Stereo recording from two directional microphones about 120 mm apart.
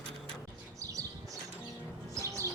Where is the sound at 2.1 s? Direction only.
25° right (ahead or behind).